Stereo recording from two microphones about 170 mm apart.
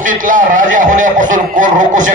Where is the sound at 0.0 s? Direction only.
50° right (ahead or behind).